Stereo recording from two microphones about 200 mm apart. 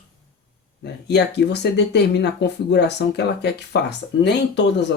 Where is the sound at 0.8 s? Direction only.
55° left (ahead or behind).